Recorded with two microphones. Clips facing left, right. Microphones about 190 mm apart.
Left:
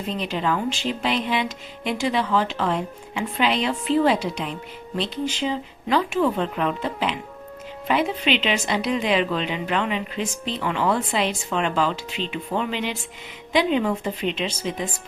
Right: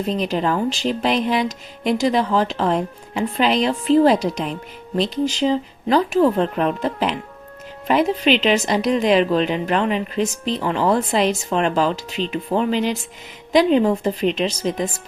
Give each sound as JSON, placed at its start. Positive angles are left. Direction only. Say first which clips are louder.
{"t": 0.1, "sound": "speech", "louder": "right 3 dB", "side_deg": -40}